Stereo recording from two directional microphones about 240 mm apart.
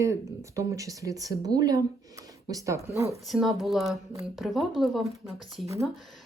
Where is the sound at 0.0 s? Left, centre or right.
Centre.